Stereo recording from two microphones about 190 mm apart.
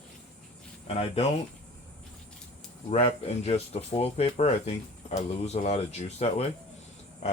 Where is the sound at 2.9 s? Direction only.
35° left (ahead or behind).